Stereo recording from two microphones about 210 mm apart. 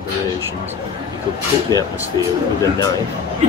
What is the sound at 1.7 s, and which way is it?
Speech, 15° left (ahead or behind).